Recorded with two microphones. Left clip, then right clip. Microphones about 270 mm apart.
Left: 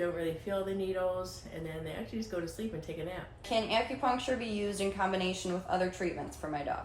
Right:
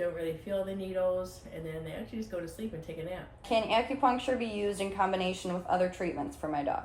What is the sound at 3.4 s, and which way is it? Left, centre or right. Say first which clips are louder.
A woman's voice: right 3 dB; right.